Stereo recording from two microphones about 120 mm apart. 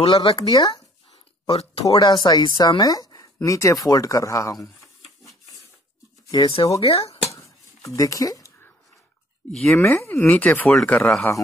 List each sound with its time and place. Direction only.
0.0 s speech: 50° left (ahead or behind)
0.5 s speech: 35° left (ahead or behind)
1.5 s speech: 55° left (ahead or behind)
2.0 s speech: 35° left (ahead or behind)
6.3 s speech: 50° left (ahead or behind)
7.2 s a sound: 25° left (ahead or behind)
9.5 s speech: 5° left (ahead or behind)
9.8 s speech: 15° left (ahead or behind)